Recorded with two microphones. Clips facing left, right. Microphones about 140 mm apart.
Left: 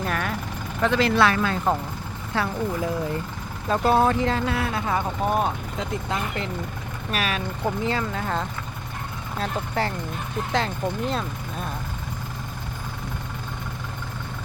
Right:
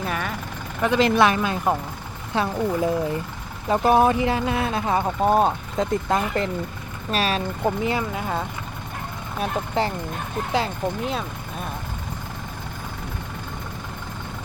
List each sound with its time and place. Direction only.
0.0 s vehicle: centre (ahead or behind)
0.8 s speech: 15° right (ahead or behind)
6.1 s speech: 40° right (ahead or behind)
7.1 s speech: 30° right (ahead or behind)
7.6 s speech: 15° right (ahead or behind)
10.5 s speech: 5° right (ahead or behind)